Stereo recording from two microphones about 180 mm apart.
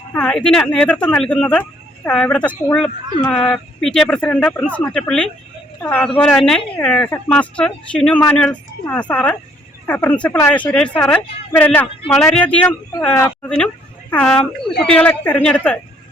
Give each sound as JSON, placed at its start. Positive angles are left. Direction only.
{"t": 0.1, "sound": "speech", "side_deg": 5}